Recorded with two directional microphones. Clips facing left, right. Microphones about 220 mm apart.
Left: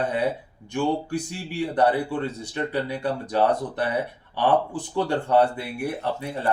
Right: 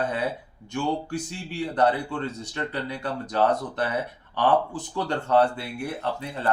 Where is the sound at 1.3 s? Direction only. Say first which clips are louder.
Left 2 dB; 10° left (ahead or behind).